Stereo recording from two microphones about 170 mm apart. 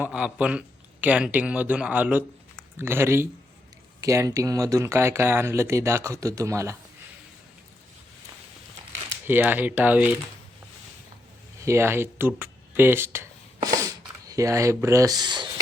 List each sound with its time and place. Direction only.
0.0 s speech: 5° right (ahead or behind)
9.2 s speech: 10° right (ahead or behind)
11.6 s speech: 15° right (ahead or behind)